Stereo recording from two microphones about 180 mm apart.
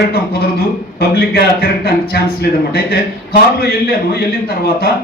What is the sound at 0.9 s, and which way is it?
A man's voice, 60° left (ahead or behind).